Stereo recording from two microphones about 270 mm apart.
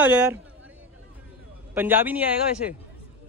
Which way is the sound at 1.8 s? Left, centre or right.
Centre.